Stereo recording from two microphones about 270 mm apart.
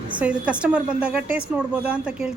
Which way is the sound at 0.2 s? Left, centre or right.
Centre.